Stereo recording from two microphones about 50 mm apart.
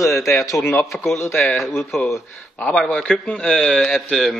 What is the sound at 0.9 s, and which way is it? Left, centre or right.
Speech, left.